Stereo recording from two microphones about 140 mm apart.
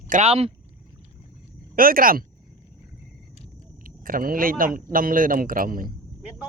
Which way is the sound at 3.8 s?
90° right.